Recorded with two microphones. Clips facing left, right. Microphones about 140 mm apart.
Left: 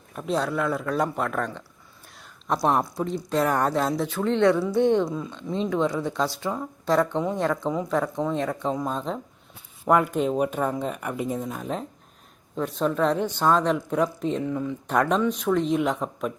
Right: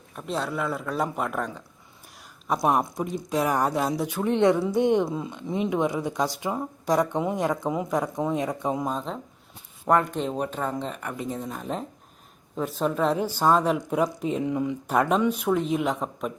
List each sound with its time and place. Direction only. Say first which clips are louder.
0.2 s speech: left 3 dB; centre (ahead or behind)
8.9 s speech: left 1 dB; centre (ahead or behind)